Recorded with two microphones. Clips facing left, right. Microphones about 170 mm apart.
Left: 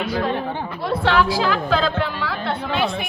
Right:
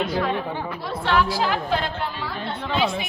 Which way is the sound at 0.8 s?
75° left (ahead or behind).